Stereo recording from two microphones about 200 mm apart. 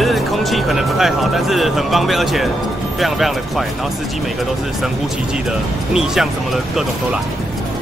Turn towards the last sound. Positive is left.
turn(degrees=0)  # may be behind; listen again after turning